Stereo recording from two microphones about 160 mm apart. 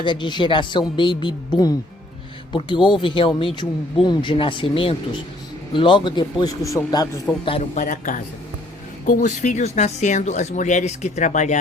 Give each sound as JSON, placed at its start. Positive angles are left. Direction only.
{"t": 0.0, "sound": "speech", "side_deg": 30}
{"t": 7.4, "sound": "speech", "side_deg": 35}
{"t": 7.8, "sound": "a man's voice", "side_deg": 55}